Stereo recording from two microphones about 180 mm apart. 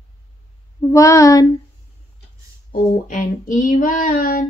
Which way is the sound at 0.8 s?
15° left (ahead or behind).